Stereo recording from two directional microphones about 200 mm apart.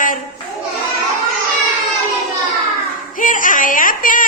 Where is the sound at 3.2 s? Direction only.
40° left (ahead or behind).